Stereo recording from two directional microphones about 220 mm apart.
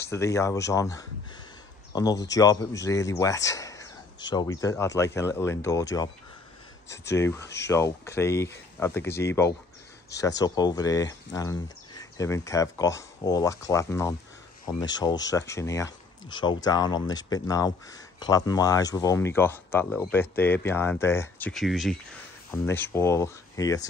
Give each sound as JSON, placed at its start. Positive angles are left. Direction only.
{"t": 0.0, "sound": "speech", "side_deg": 15}
{"t": 22.5, "sound": "speech", "side_deg": 10}